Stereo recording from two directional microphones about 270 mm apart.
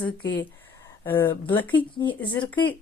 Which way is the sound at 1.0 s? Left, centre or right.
Centre.